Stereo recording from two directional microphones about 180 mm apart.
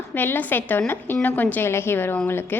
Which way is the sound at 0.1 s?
10° left (ahead or behind).